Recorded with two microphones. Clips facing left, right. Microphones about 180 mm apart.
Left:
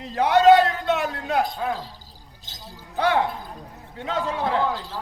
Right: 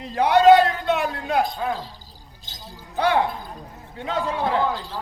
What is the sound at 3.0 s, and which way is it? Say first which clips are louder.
Basketball bounce: right 1 dB; 15° right (ahead or behind).